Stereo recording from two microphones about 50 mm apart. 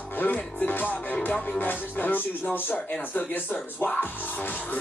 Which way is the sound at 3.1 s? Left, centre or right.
Left.